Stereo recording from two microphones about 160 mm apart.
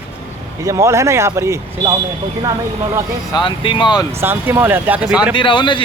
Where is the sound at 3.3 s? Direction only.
30° left (ahead or behind).